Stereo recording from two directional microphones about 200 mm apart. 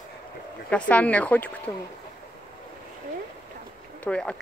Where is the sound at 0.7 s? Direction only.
5° left (ahead or behind).